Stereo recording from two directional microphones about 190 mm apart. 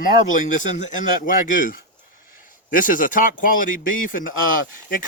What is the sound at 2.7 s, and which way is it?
Speech, 45° left (ahead or behind).